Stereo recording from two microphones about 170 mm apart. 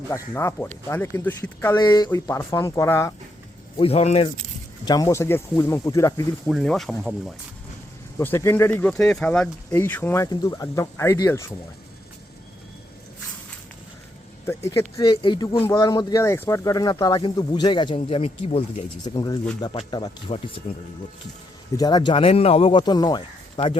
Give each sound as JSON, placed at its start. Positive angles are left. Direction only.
{"t": 0.1, "sound": "speech", "side_deg": 15}
{"t": 1.7, "sound": "speech", "side_deg": 25}
{"t": 3.8, "sound": "speech", "side_deg": 35}
{"t": 4.9, "sound": "speech", "side_deg": 20}
{"t": 6.5, "sound": "speech", "side_deg": 0}
{"t": 8.2, "sound": "speech", "side_deg": 15}
{"t": 8.9, "sound": "speech", "side_deg": 5}
{"t": 10.2, "sound": "speech", "side_deg": 20}
{"t": 14.4, "sound": "speech", "side_deg": 15}
{"t": 19.0, "sound": "speech", "side_deg": 25}
{"t": 21.8, "sound": "speech", "side_deg": 25}